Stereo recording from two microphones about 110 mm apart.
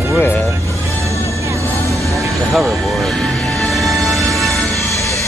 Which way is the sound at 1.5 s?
30° right (ahead or behind).